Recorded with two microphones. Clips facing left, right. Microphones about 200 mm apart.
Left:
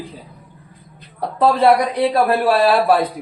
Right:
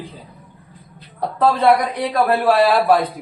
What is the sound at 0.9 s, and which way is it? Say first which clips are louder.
A woman's voice: left 1 dB; 15° left (ahead or behind).